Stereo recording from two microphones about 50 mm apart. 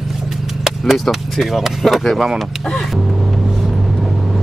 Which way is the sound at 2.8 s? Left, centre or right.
Centre.